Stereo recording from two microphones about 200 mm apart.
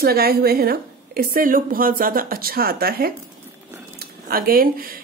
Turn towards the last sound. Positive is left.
turn(degrees=-45)  # may be behind; listen again after turning